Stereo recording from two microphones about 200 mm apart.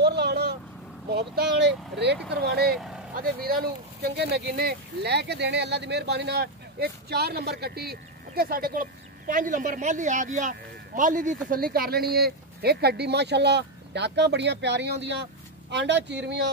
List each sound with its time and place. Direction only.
0.0 s vehicle: 55° right (ahead or behind)
1.1 s speech: 55° right (ahead or behind)
2.7 s speech: centre (ahead or behind)
3.2 s speech: 45° right (ahead or behind)